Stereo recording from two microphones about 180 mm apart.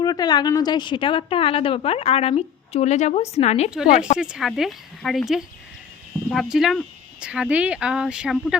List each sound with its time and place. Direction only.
0.0 s a woman's voice: 20° left (ahead or behind)
4.2 s speech: 5° right (ahead or behind)
6.3 s speech: centre (ahead or behind)